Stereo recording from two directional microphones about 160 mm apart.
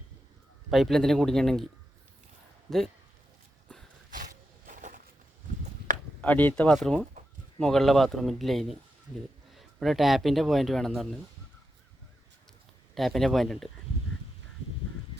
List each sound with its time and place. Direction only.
0.7 s speech: centre (ahead or behind)
2.6 s speech: centre (ahead or behind)
4.1 s a sound: 55° right (ahead or behind)
6.2 s speech: 10° left (ahead or behind)
12.9 s speech: centre (ahead or behind)